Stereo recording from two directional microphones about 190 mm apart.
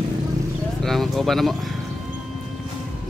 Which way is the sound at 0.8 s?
Centre (ahead or behind).